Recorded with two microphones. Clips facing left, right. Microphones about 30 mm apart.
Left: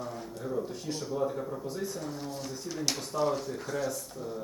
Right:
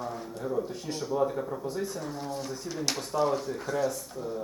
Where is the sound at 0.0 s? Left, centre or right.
Centre.